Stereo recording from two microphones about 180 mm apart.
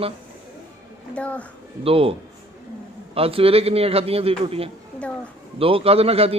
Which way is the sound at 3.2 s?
30° right (ahead or behind).